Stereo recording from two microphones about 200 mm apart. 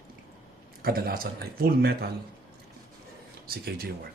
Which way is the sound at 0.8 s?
50° right (ahead or behind).